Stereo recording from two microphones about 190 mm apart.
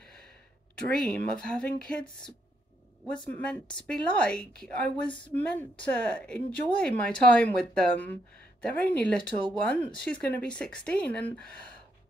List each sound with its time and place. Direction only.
0.8 s a woman's voice: 5° left (ahead or behind)
3.3 s a woman's voice: 10° left (ahead or behind)
5.0 s speech: 25° left (ahead or behind)
5.3 s a woman's voice: 10° left (ahead or behind)